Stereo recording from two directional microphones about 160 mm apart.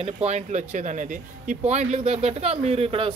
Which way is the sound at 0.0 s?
45° right (ahead or behind).